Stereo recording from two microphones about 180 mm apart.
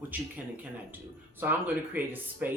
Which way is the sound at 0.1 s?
10° right (ahead or behind).